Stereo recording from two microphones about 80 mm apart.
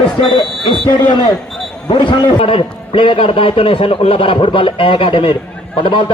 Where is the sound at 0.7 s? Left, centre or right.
Left.